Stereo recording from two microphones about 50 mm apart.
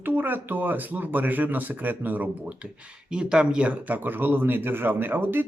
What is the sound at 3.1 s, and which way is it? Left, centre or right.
Speech, centre.